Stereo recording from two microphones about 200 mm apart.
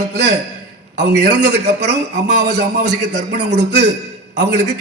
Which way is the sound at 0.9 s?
55° right (ahead or behind).